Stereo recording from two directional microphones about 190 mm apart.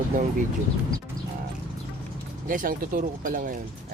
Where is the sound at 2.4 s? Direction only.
45° right (ahead or behind).